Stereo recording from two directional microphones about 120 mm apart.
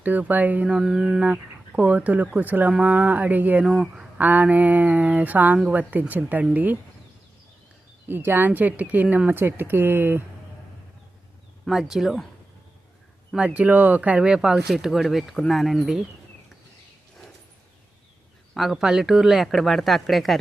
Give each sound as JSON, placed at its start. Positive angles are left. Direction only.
{"t": 0.0, "sound": "speech", "side_deg": -15}
{"t": 8.0, "sound": "speech", "side_deg": -20}
{"t": 11.6, "sound": "speech", "side_deg": -5}
{"t": 13.3, "sound": "speech", "side_deg": -10}
{"t": 18.5, "sound": "speech", "side_deg": 0}